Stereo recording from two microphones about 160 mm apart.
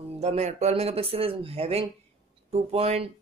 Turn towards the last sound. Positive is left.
turn(degrees=-40)  # may be behind; listen again after turning